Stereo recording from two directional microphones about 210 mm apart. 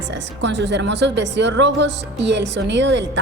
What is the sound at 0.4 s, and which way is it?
A woman's voice, 55° right (ahead or behind).